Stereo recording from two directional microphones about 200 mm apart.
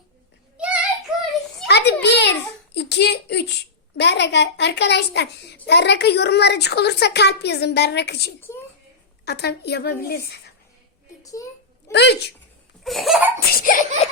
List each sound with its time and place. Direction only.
0.5 s child singing: 5° right (ahead or behind)
1.6 s a sound: 55° left (ahead or behind)
5.6 s a child's voice: 55° left (ahead or behind)
8.4 s a child's voice: 10° left (ahead or behind)
9.2 s a child's voice: 55° left (ahead or behind)
11.2 s a child's voice: 15° left (ahead or behind)
11.9 s speech: 55° left (ahead or behind)
12.8 s laughter: centre (ahead or behind)
13.3 s laughter: 45° left (ahead or behind)